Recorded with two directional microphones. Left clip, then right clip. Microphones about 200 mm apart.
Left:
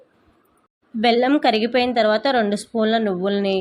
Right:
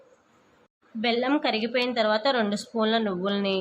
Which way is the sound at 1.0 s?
25° left (ahead or behind).